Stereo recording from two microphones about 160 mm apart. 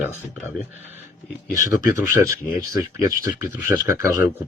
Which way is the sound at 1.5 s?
55° left (ahead or behind).